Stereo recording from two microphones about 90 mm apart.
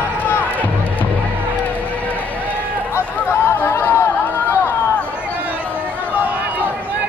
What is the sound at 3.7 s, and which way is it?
Chatter, 30° left (ahead or behind).